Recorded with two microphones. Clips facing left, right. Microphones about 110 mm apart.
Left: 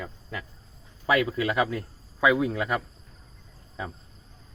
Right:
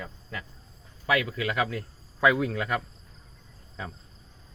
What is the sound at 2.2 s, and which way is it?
Speech, 10° left (ahead or behind).